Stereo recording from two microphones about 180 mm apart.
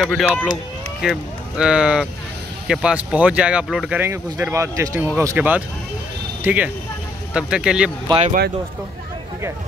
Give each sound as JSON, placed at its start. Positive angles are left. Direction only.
{"t": 0.0, "sound": "speech", "side_deg": 0}
{"t": 4.0, "sound": "speech", "side_deg": -15}